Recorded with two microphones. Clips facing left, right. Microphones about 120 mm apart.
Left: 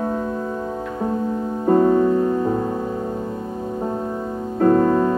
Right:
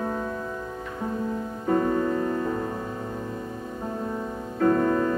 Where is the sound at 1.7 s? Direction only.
25° left (ahead or behind).